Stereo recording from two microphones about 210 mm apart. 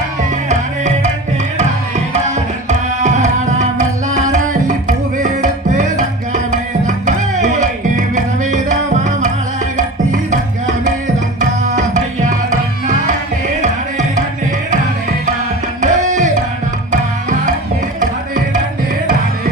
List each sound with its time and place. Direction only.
0.4 s music: 35° right (ahead or behind)
2.1 s tabla: 35° right (ahead or behind)
11.3 s tabla: 35° right (ahead or behind)
15.8 s music: 35° right (ahead or behind)